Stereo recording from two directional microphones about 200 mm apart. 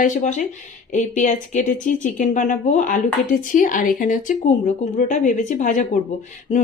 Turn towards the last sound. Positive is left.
turn(degrees=35)  # may be behind; listen again after turning